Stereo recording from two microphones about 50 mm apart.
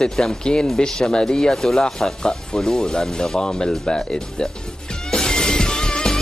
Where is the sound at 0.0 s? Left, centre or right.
Centre.